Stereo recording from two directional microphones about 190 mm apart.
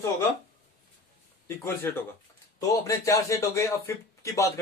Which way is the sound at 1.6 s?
10° left (ahead or behind).